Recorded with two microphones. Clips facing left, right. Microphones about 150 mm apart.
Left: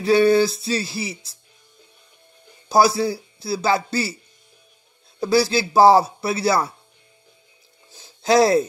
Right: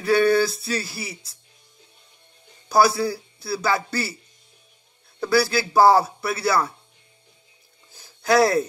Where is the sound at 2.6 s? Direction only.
20° left (ahead or behind).